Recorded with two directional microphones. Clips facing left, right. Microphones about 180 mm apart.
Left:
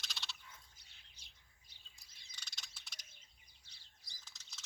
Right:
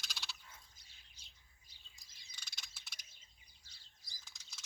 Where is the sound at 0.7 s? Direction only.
65° left (ahead or behind).